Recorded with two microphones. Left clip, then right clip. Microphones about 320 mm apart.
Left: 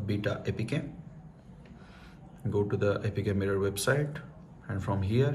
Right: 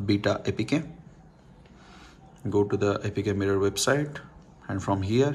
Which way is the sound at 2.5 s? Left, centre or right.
Centre.